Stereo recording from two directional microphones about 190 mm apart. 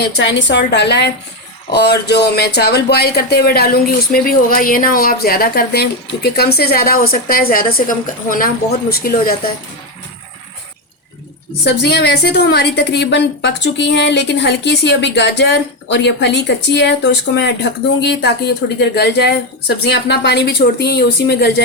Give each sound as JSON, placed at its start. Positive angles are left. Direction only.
{"t": 0.2, "sound": "a woman's voice", "side_deg": 75}
{"t": 11.6, "sound": "a woman's voice", "side_deg": 60}